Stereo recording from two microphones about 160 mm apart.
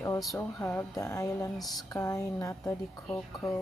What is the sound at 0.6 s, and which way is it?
A woman's voice, 15° left (ahead or behind).